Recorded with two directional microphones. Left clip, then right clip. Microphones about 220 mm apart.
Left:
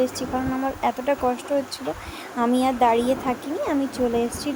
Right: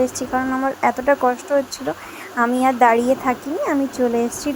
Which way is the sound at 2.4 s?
5° right (ahead or behind).